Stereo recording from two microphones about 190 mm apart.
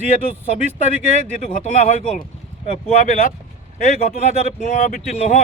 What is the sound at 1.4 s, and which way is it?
Speech, 35° left (ahead or behind).